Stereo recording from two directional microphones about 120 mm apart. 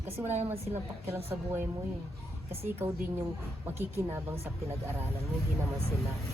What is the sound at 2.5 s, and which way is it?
Speech, 20° right (ahead or behind).